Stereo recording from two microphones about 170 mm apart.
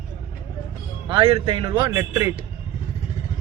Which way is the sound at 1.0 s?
30° right (ahead or behind).